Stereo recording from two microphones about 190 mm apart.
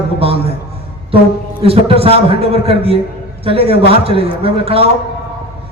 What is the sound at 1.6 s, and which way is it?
A man's voice, 30° right (ahead or behind).